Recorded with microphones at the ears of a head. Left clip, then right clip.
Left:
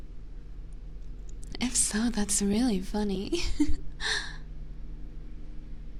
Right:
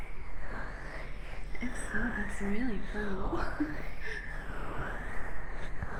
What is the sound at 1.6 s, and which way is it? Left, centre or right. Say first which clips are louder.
A woman's voice: left 6 dB; left.